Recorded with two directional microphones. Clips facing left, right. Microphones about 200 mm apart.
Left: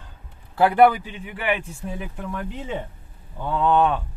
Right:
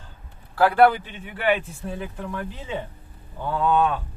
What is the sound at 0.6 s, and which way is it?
Speech, 20° left (ahead or behind).